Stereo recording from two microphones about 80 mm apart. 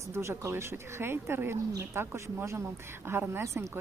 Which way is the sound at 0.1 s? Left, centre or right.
Right.